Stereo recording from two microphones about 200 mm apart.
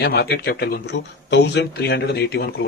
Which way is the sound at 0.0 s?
55° left (ahead or behind).